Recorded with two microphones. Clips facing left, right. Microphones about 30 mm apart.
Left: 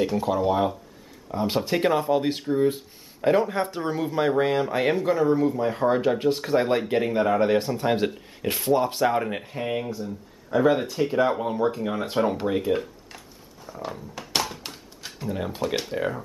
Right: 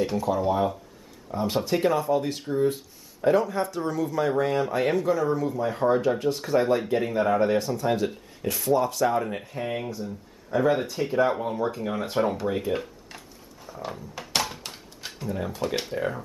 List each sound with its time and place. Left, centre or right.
0.3 s speech: centre
2.4 s speech: centre
7.5 s speech: left
9.6 s speech: centre
13.7 s a sound: centre
15.1 s speech: centre
15.6 s speech: centre